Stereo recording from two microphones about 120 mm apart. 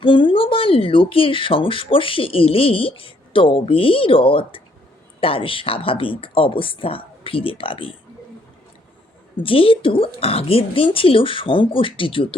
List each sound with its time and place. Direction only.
0.0 s speech: 45° left (ahead or behind)
9.4 s speech: 50° left (ahead or behind)